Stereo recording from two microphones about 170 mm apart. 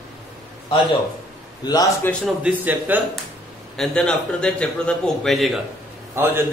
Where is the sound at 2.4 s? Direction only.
10° right (ahead or behind).